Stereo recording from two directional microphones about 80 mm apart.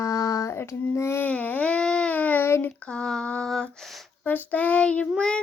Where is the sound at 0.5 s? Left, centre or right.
Left.